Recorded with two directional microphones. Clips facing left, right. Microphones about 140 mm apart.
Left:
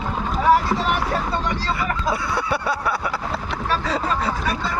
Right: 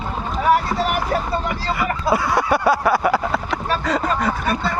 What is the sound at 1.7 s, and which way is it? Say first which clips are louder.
Speech: right 4 dB; 70° right (ahead or behind).